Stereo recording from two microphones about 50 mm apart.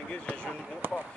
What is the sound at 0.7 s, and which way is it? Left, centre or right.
Speech, right.